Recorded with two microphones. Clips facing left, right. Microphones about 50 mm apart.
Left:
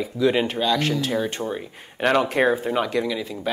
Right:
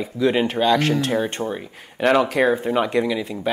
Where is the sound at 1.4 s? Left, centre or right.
Centre.